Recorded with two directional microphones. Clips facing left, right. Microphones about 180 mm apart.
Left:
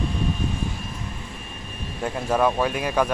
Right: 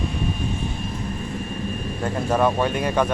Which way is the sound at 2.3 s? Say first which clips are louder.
Right 1 dB; centre (ahead or behind).